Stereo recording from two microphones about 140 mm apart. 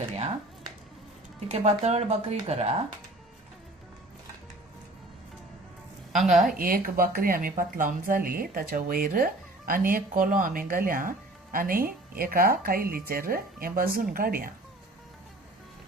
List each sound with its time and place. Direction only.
1.5 s speech: 50° right (ahead or behind)
6.1 s a woman's voice: centre (ahead or behind)
6.4 s speech: 90° right
11.5 s speech: 90° right